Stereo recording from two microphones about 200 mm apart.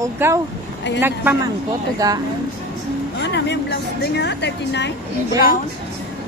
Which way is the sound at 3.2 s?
60° left (ahead or behind).